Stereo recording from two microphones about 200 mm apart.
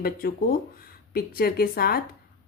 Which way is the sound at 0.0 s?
50° left (ahead or behind).